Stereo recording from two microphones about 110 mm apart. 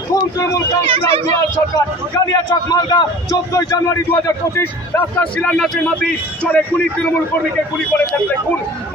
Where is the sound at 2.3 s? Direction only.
40° left (ahead or behind).